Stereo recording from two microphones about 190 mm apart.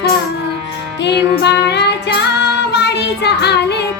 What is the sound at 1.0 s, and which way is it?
Music, 60° left (ahead or behind).